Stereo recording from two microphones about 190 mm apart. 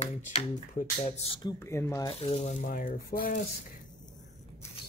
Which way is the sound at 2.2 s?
35° left (ahead or behind).